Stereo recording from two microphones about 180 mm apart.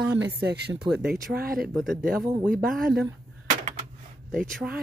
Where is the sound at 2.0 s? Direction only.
55° right (ahead or behind).